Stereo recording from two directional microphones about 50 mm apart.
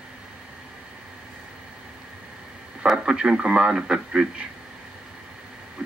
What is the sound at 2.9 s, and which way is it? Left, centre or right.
Speech, centre.